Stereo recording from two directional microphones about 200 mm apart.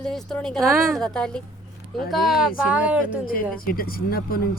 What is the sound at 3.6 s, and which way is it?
Speech, 45° left (ahead or behind).